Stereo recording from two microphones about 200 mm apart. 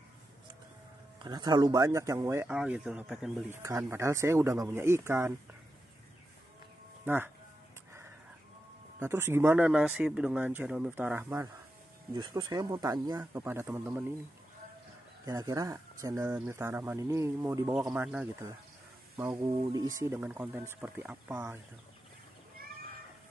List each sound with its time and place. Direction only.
1.2 s speech: 20° right (ahead or behind)
9.0 s speech: 10° right (ahead or behind)
12.1 s speech: 20° right (ahead or behind)
15.2 s speech: 15° right (ahead or behind)
22.6 s cat: 50° right (ahead or behind)